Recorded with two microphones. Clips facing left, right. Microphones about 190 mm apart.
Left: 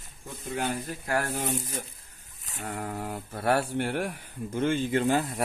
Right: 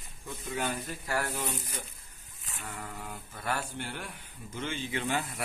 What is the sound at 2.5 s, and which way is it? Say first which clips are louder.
Speech: left 8 dB; 60° left (ahead or behind).